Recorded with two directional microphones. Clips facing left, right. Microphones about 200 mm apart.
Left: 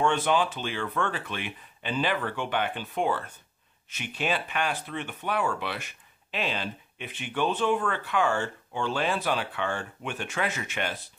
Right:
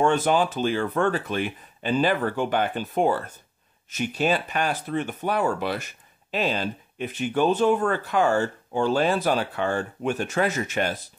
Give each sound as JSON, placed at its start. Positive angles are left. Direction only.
{"t": 0.0, "sound": "speech", "side_deg": -40}